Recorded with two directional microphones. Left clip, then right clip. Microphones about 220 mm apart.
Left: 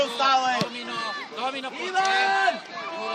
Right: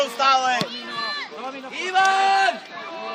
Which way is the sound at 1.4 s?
45° left (ahead or behind).